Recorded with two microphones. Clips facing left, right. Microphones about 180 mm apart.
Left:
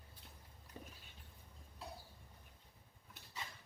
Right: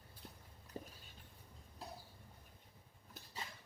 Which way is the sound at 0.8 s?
35° right (ahead or behind).